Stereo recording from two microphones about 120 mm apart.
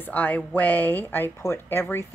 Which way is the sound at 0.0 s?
15° left (ahead or behind).